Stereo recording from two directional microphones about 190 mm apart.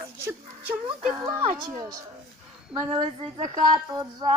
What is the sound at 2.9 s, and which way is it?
Speech, 30° right (ahead or behind).